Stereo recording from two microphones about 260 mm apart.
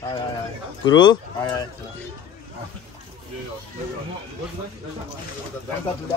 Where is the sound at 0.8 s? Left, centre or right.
Centre.